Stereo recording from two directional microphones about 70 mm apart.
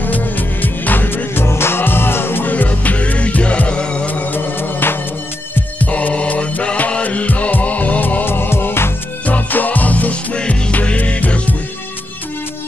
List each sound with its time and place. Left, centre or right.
0.0 s music: left
5.5 s music: centre